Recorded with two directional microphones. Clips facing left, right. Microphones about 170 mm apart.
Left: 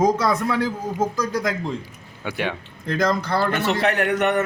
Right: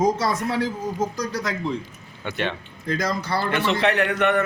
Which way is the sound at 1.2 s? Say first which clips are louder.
Left 4 dB; 50° left (ahead or behind).